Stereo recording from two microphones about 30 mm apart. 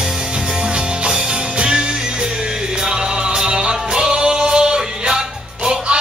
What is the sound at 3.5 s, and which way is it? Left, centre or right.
Music, right.